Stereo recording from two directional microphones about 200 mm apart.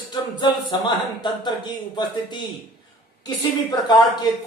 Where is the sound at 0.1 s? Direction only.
20° left (ahead or behind).